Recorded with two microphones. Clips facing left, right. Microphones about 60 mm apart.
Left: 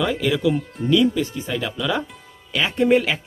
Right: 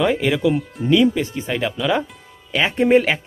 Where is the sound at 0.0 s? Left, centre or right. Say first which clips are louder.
Right 3 dB; right.